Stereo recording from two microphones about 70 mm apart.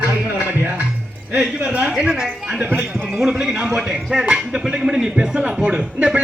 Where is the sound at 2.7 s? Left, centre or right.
Right.